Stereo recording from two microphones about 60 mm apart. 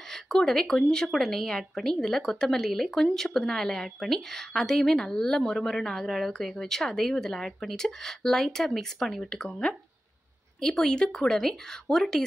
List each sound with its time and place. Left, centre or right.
0.0 s speech: centre
9.4 s speech: centre